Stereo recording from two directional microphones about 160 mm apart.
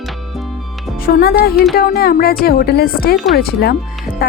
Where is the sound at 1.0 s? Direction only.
75° left (ahead or behind).